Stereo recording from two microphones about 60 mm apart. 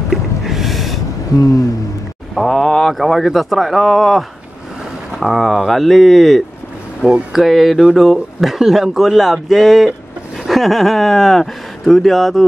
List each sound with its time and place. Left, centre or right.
0.1 s snort: centre
1.3 s speech: left
2.3 s speech: centre
7.0 s speech: centre
7.3 s speech: centre